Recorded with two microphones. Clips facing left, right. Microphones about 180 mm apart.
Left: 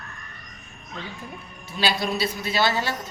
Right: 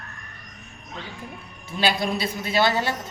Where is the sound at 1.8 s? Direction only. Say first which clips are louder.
Right 1 dB; 50° right (ahead or behind).